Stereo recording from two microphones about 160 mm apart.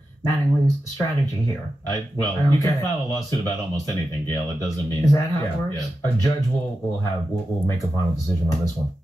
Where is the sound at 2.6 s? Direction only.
25° right (ahead or behind).